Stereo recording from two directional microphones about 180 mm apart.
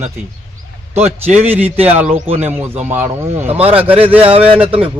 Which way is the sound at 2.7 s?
35° right (ahead or behind).